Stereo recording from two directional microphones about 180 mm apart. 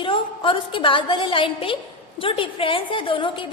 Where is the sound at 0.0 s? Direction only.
30° left (ahead or behind).